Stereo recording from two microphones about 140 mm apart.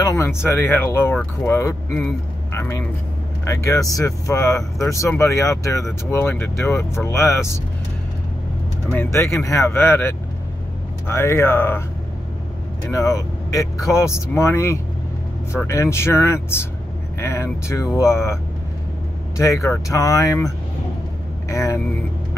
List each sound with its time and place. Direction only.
0.0 s speech: 20° left (ahead or behind)
8.9 s speech: 15° left (ahead or behind)
12.9 s speech: 25° left (ahead or behind)